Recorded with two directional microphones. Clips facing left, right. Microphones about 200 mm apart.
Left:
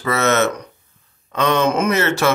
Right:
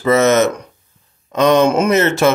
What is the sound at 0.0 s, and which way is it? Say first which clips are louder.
Speech: right 5 dB; 20° right (ahead or behind).